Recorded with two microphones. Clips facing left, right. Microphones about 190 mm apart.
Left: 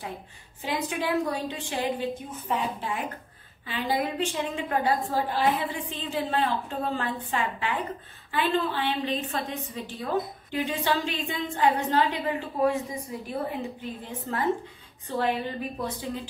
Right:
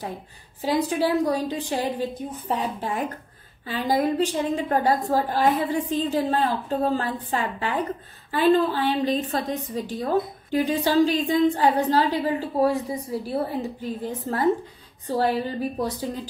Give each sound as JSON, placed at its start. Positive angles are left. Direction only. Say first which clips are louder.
{"t": 0.6, "sound": "a woman's voice", "louder": "right 7 dB", "side_deg": -35}